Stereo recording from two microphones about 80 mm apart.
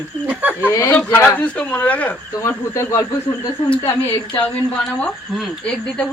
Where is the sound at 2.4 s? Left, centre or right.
Left.